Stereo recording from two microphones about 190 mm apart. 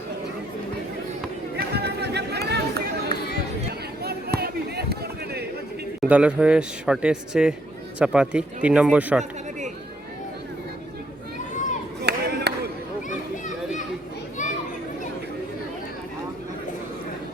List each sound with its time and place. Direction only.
1.5 s chatter: 60° right (ahead or behind)
3.7 s a sound: 55° right (ahead or behind)
6.0 s speech: 5° right (ahead or behind)
12.0 s clapping: 60° right (ahead or behind)